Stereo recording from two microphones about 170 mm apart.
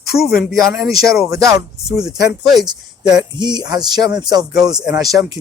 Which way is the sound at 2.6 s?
25° right (ahead or behind).